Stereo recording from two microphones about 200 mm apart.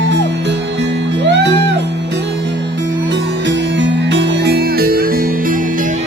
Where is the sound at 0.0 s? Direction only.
60° right (ahead or behind).